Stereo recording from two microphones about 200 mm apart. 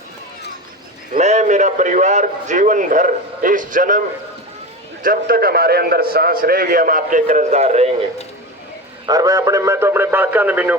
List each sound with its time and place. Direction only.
1.1 s a man's voice: 35° right (ahead or behind)
5.0 s a man's voice: 50° right (ahead or behind)
9.0 s speech: 15° right (ahead or behind)